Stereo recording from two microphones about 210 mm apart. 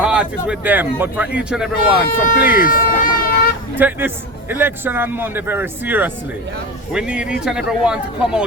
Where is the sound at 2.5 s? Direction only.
40° left (ahead or behind).